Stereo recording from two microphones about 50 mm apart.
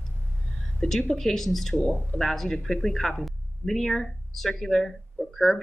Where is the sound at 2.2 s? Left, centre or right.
Centre.